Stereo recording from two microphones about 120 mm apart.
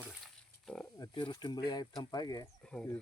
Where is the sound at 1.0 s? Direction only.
40° left (ahead or behind).